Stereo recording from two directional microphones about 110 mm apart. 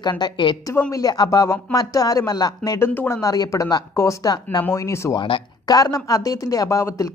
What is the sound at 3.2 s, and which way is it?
Speech, 30° left (ahead or behind).